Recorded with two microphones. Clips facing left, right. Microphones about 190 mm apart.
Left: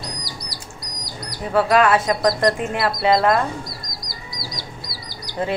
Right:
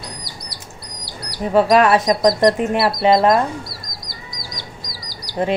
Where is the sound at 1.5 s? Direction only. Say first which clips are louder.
Right 3 dB; 20° right (ahead or behind).